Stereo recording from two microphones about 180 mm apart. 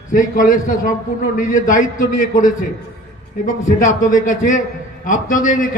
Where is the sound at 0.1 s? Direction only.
50° left (ahead or behind).